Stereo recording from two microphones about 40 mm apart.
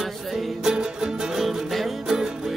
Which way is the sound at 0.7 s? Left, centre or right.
Centre.